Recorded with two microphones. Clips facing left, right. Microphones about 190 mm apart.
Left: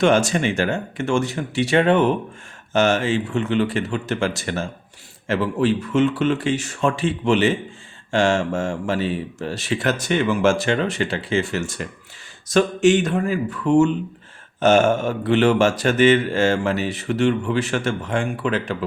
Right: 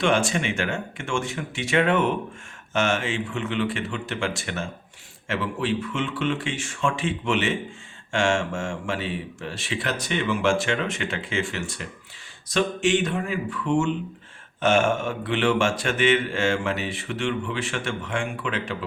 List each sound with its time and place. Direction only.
0.0 s speech: 40° left (ahead or behind)